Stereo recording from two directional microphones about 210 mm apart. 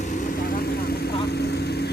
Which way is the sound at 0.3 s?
45° left (ahead or behind).